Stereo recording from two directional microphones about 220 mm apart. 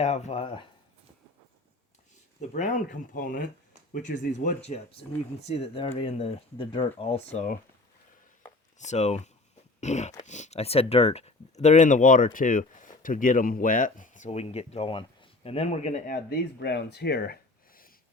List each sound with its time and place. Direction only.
0.0 s speech: 30° left (ahead or behind)
2.5 s speech: 35° left (ahead or behind)
8.8 s speech: 30° left (ahead or behind)
16.1 s speech: 45° left (ahead or behind)